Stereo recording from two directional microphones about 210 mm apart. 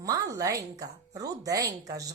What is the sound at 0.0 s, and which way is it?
Speech, 15° right (ahead or behind).